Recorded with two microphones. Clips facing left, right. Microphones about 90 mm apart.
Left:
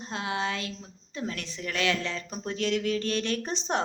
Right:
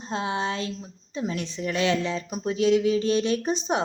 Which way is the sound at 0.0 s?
25° right (ahead or behind).